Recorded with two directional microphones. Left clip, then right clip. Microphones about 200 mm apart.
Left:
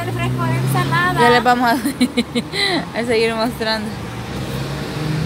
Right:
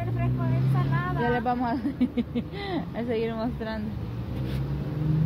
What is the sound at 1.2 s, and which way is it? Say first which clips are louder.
A woman's voice: left 13 dB; 20° left (ahead or behind).